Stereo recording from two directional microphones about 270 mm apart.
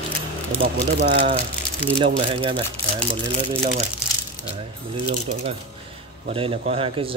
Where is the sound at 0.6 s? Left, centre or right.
Right.